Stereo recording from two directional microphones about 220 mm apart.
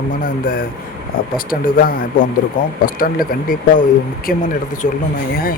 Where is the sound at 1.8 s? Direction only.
40° left (ahead or behind).